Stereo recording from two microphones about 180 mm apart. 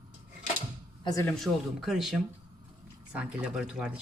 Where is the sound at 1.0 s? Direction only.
15° left (ahead or behind).